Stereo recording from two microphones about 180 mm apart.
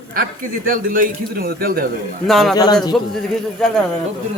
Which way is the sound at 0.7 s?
50° right (ahead or behind).